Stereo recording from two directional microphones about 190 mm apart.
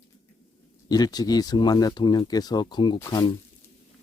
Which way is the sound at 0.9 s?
20° left (ahead or behind).